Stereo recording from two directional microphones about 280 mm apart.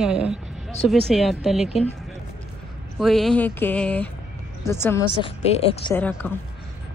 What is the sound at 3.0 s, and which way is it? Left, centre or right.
A woman's voice, centre.